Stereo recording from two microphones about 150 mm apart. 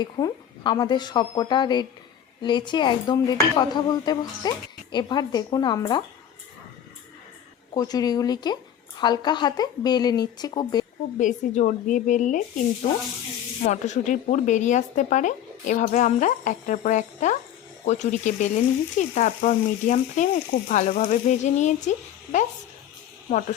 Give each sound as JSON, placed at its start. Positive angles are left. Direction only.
{"t": 0.0, "sound": "speech", "side_deg": 30}
{"t": 7.7, "sound": "speech", "side_deg": 25}
{"t": 11.2, "sound": "speech", "side_deg": 55}
{"t": 13.6, "sound": "speech", "side_deg": 50}
{"t": 17.8, "sound": "frying", "side_deg": 55}